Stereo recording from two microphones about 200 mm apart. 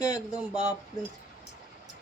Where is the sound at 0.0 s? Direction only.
35° right (ahead or behind).